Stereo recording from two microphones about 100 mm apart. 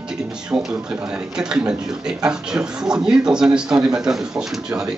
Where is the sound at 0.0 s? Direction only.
5° right (ahead or behind).